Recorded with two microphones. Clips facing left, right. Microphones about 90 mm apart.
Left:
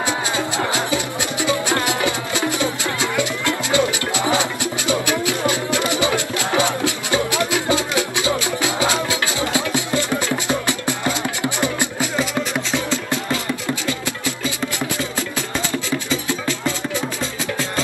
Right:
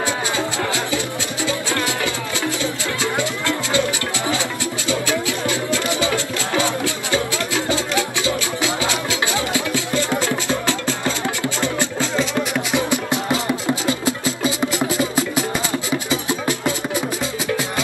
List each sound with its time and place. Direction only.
0.7 s music: 20° left (ahead or behind)
12.7 s music: 20° right (ahead or behind)